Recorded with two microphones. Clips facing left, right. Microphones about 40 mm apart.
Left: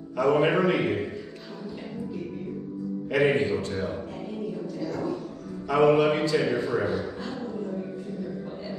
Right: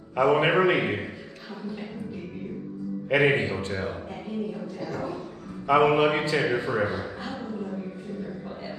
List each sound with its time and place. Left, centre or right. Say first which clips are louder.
0.2 s a man's voice: right 1 dB; right
3.1 s a man's voice: right 1 dB; right
5.7 s a man's voice: even; right